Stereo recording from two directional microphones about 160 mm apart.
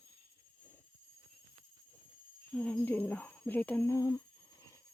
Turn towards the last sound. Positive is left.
turn(degrees=20)  # may be behind; listen again after turning